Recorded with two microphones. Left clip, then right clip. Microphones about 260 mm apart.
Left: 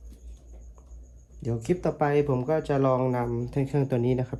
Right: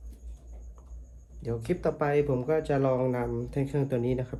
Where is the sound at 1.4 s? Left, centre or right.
Left.